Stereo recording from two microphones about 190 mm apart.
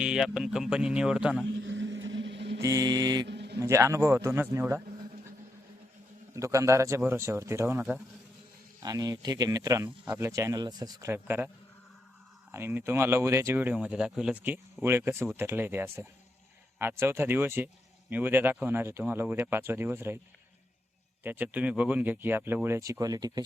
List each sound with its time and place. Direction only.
0.0 s speech: 5° right (ahead or behind)
1.5 s vehicle: 75° right (ahead or behind)
2.6 s mantra: 15° right (ahead or behind)
3.2 s a sound: 65° right (ahead or behind)
3.6 s speech: 15° right (ahead or behind)
6.3 s speech: 15° right (ahead or behind)
8.8 s speech: 20° right (ahead or behind)
21.2 s speech: 10° right (ahead or behind)
22.9 s mantra: 20° right (ahead or behind)